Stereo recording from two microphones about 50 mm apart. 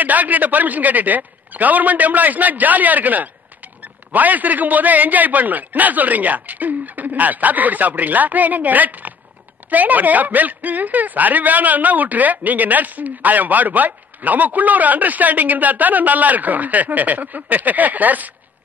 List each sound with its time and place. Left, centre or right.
0.0 s speech: right